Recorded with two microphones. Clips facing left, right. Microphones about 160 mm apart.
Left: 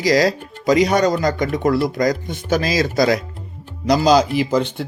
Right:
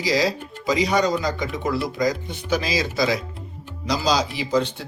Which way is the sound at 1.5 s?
65° left (ahead or behind).